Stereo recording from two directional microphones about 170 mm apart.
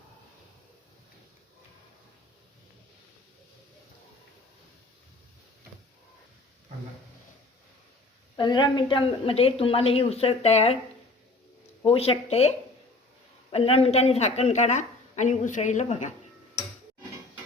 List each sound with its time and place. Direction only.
8.4 s a woman's voice: 25° left (ahead or behind)
11.9 s a woman's voice: 35° left (ahead or behind)